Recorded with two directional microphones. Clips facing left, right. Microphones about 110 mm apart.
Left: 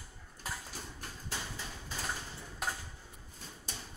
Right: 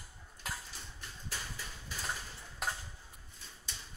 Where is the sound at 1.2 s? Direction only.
25° left (ahead or behind).